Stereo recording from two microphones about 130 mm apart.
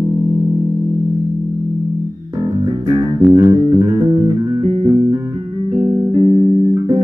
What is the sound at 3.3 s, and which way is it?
Music, 35° right (ahead or behind).